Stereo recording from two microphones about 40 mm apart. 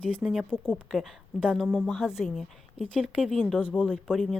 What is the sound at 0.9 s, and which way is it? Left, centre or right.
Speech, centre.